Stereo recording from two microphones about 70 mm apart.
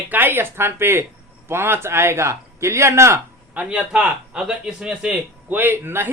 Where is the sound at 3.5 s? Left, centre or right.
Right.